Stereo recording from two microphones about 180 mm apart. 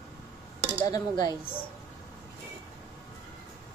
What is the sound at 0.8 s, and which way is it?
Speech, 20° left (ahead or behind).